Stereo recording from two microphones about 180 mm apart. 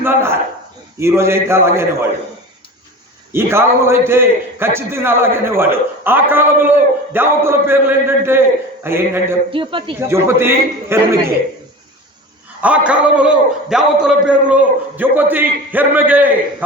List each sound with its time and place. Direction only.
0.0 s a man's voice: 10° right (ahead or behind)
3.3 s a man's voice: 15° right (ahead or behind)
9.5 s a man's voice: 30° right (ahead or behind)
10.1 s a man's voice: 15° right (ahead or behind)
12.6 s a man's voice: 5° right (ahead or behind)